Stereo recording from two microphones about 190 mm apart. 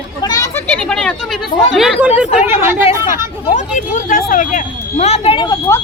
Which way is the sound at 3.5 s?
40° left (ahead or behind).